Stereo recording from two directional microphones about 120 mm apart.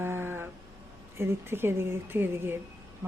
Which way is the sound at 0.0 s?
20° right (ahead or behind).